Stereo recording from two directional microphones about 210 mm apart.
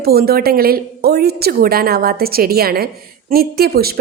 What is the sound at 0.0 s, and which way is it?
A woman's voice, 45° right (ahead or behind).